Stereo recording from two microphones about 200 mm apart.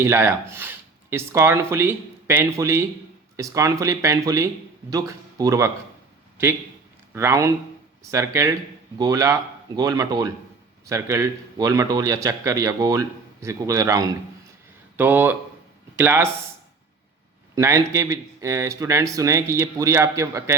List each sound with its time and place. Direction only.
0.0 s a man's voice: 10° right (ahead or behind)
7.1 s a man's voice: 15° right (ahead or behind)
17.5 s a man's voice: 15° right (ahead or behind)